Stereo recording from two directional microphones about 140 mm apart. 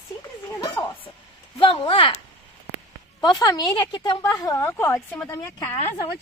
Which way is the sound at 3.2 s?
30° left (ahead or behind).